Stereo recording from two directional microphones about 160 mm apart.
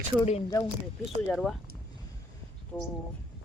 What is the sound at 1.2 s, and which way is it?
Speech, centre (ahead or behind).